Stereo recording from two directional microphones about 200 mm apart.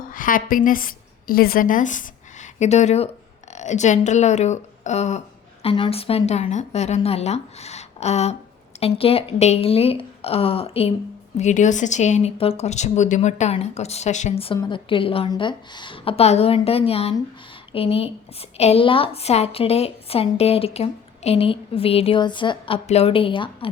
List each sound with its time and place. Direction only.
0.1 s a woman's voice: 45° left (ahead or behind); by 23.6 s 25° left (ahead or behind)